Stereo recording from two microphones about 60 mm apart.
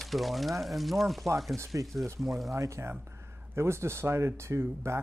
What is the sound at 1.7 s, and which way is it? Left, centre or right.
Speech, right.